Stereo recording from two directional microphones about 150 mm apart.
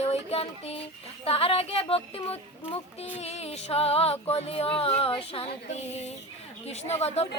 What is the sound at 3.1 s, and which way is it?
Music, 45° left (ahead or behind).